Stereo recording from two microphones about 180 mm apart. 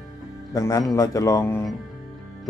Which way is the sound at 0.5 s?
20° left (ahead or behind).